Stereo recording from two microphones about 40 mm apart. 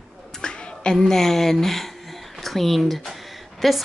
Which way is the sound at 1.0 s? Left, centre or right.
Centre.